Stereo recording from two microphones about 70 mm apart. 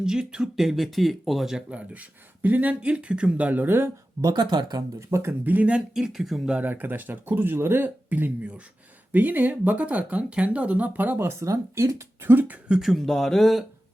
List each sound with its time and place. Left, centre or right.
0.0 s speech: centre
1.7 s speech: right
4.2 s speech: right
4.9 s speech: right
5.5 s speech: right
5.9 s speech: centre
6.7 s speech: right
11.4 s speech: right
12.3 s speech: right
12.6 s speech: centre